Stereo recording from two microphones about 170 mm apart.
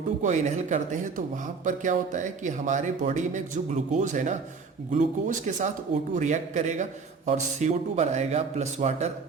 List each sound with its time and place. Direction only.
0.2 s a man's voice: 45° right (ahead or behind)